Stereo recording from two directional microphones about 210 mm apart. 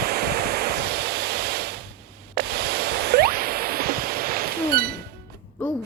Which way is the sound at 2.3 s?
50° right (ahead or behind).